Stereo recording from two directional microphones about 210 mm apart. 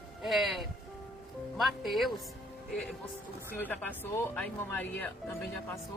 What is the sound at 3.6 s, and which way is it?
Speech, 10° left (ahead or behind).